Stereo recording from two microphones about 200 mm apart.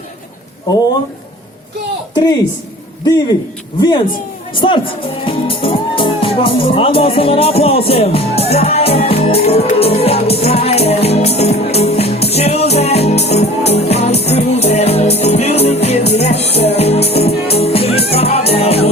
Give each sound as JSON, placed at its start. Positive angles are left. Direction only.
{"t": 3.8, "sound": "speech", "side_deg": 20}
{"t": 14.3, "sound": "music", "side_deg": 30}